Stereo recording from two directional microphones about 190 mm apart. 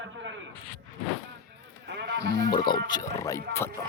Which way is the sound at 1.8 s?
65° right (ahead or behind).